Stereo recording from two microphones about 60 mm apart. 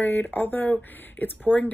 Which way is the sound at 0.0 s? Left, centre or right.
Left.